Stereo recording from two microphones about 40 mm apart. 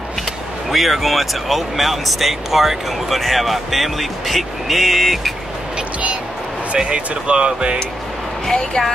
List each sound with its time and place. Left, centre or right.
0.7 s speech: centre
6.8 s speech: right
8.5 s speech: centre